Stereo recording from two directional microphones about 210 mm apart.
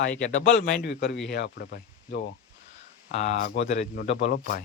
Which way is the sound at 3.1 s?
35° left (ahead or behind).